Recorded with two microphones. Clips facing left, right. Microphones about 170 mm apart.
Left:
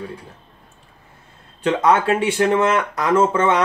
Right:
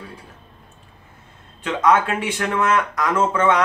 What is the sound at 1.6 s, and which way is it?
Speech, 30° left (ahead or behind).